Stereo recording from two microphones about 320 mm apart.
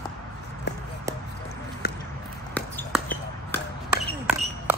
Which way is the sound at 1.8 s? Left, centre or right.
Left.